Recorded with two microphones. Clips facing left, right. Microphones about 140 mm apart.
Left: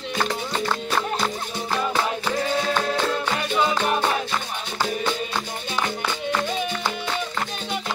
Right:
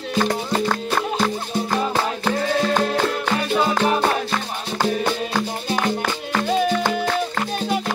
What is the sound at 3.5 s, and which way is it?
Music, 40° right (ahead or behind).